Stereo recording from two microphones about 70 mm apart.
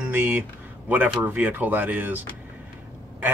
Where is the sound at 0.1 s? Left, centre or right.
Right.